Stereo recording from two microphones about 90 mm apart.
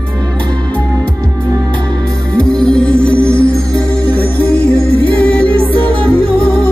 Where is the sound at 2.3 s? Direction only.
10° left (ahead or behind).